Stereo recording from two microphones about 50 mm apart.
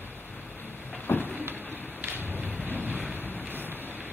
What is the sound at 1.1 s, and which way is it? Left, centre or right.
Vehicle, left.